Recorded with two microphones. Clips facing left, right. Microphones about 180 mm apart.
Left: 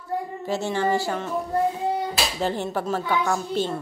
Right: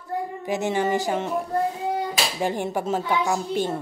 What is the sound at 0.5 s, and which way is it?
Speech, 15° right (ahead or behind).